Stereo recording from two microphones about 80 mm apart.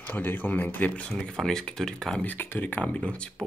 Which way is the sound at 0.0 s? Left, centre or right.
Left.